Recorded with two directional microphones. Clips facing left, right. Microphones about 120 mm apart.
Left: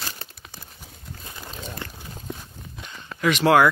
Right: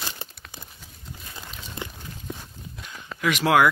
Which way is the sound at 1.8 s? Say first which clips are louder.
Right 1 dB; 15° right (ahead or behind).